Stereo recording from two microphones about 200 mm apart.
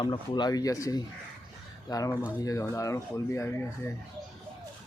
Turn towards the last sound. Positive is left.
turn(degrees=10)  # may be behind; listen again after turning